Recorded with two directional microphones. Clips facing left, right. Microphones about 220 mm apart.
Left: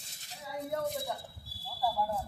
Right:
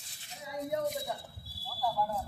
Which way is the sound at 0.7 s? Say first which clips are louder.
Right 1 dB; 15° right (ahead or behind).